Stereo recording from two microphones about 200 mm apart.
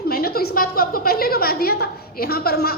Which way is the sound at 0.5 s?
45° left (ahead or behind).